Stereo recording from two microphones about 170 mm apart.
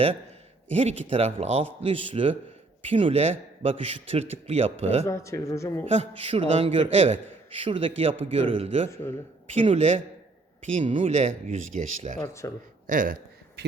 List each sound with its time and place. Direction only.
0.7 s a man's voice: 35° right (ahead or behind)
5.0 s speech: 15° left (ahead or behind)
5.9 s a man's voice: 40° right (ahead or behind)
8.9 s speech: 15° left (ahead or behind)
9.6 s a man's voice: 40° right (ahead or behind)
12.2 s speech: 15° left (ahead or behind)
12.9 s speech: 50° right (ahead or behind)